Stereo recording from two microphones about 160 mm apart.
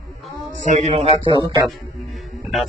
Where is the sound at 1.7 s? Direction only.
Centre (ahead or behind).